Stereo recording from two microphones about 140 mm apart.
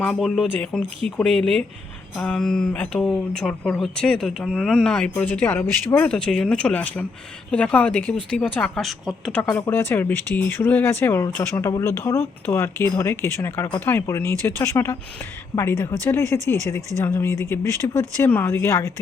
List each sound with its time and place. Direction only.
0.0 s speech: centre (ahead or behind)
9.4 s speech: 15° left (ahead or behind)